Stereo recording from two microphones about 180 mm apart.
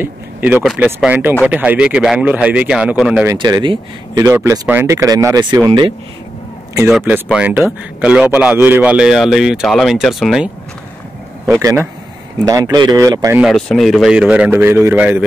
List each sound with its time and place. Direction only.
0.0 s speech: 10° right (ahead or behind)
3.3 s speech: 20° right (ahead or behind)
6.9 s a man's voice: 5° right (ahead or behind)
11.6 s speech: 10° right (ahead or behind)
13.4 s speech: centre (ahead or behind)